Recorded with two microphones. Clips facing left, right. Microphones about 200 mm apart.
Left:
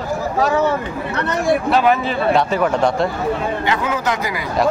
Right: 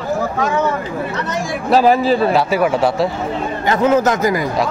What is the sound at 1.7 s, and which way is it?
Speech, 35° right (ahead or behind).